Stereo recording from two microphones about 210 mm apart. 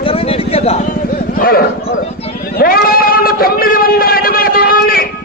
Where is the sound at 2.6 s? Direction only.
45° left (ahead or behind).